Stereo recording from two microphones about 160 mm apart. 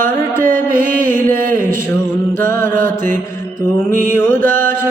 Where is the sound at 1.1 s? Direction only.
15° left (ahead or behind).